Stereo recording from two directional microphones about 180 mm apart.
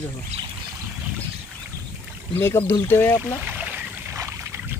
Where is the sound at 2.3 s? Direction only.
15° left (ahead or behind).